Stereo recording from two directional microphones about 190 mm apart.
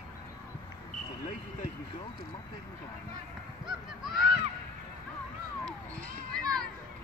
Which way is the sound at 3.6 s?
Centre (ahead or behind).